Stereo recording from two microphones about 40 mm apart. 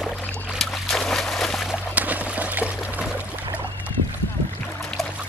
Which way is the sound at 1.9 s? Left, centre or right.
Right.